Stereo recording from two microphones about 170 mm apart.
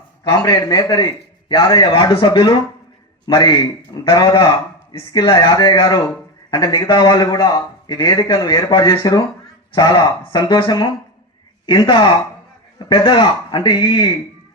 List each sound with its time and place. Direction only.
0.3 s a man's voice: 25° left (ahead or behind)